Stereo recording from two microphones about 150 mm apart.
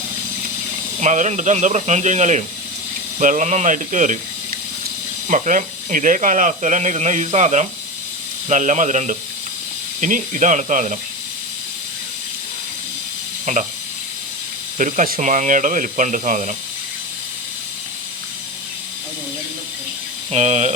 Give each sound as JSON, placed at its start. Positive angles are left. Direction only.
{"t": 0.9, "sound": "speech", "side_deg": -55}
{"t": 13.4, "sound": "speech", "side_deg": -55}
{"t": 14.8, "sound": "speech", "side_deg": -60}
{"t": 15.2, "sound": "speech", "side_deg": -55}
{"t": 20.3, "sound": "speech", "side_deg": -50}